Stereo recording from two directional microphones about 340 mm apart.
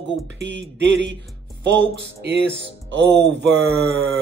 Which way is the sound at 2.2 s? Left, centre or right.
Right.